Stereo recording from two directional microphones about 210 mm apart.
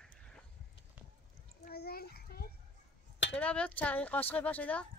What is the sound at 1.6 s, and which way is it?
Children playing, 50° left (ahead or behind).